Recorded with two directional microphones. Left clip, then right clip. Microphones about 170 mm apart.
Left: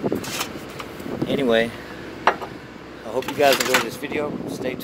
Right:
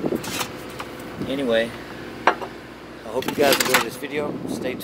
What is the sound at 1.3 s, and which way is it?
Speech, 40° left (ahead or behind).